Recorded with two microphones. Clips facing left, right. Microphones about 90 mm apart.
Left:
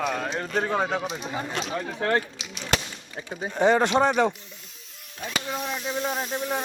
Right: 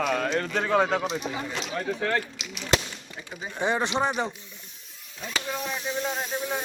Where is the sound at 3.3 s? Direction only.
55° left (ahead or behind).